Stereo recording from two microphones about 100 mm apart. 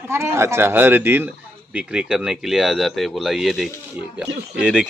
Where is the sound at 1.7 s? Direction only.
10° right (ahead or behind).